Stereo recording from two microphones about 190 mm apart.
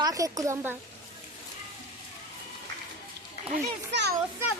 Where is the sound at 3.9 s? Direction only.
65° right (ahead or behind).